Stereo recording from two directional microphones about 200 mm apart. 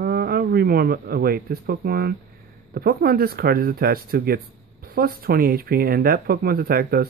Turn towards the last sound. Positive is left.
turn(degrees=-50)  # may be behind; listen again after turning